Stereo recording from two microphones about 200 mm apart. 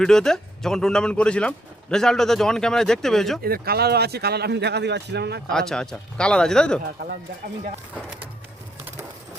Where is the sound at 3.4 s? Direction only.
50° right (ahead or behind).